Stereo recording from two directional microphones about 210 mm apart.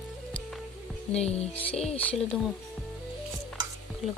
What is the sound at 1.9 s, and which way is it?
Music, 5° left (ahead or behind).